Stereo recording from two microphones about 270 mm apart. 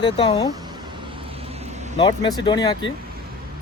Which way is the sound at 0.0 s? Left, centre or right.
Centre.